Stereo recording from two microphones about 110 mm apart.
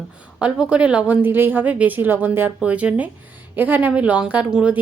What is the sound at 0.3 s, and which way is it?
A woman's voice, 10° right (ahead or behind).